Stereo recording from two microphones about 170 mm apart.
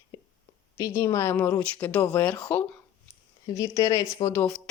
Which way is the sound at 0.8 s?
20° left (ahead or behind).